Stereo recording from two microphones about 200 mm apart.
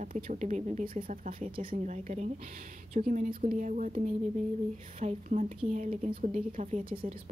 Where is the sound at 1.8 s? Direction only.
35° right (ahead or behind).